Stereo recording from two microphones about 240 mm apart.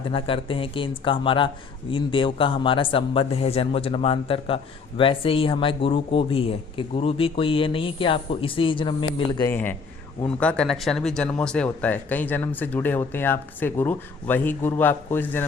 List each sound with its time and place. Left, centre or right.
0.0 s a man's voice: left
9.5 s speech: centre